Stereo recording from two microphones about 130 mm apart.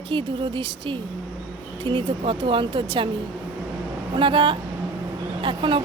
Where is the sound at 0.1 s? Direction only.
40° right (ahead or behind).